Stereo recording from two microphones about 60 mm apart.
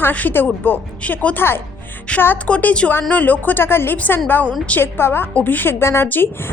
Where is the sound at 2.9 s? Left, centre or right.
Left.